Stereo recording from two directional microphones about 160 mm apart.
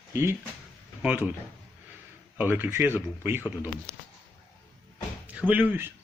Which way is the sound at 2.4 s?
10° right (ahead or behind).